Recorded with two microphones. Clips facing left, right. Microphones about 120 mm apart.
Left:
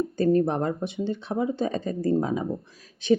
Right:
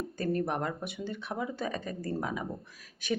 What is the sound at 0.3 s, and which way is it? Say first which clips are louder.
Speech: left 8 dB; 30° left (ahead or behind).